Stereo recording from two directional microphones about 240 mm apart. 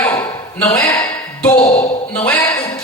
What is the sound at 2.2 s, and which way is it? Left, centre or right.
Speech, centre.